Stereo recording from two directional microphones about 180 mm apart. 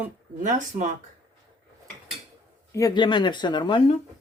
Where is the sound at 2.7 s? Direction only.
20° left (ahead or behind).